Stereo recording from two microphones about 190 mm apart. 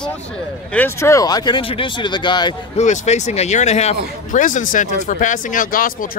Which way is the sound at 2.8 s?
35° left (ahead or behind).